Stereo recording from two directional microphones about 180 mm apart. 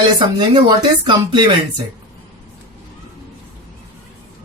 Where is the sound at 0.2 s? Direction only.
25° right (ahead or behind).